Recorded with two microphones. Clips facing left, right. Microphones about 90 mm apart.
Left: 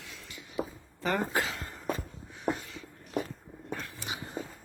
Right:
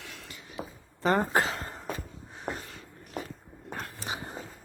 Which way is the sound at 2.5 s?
40° right (ahead or behind).